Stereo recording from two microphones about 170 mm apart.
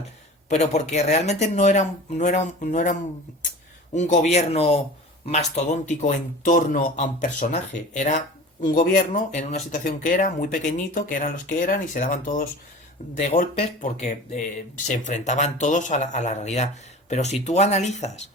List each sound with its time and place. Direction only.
0.4 s speech: 40° left (ahead or behind)
3.9 s speech: 45° left (ahead or behind)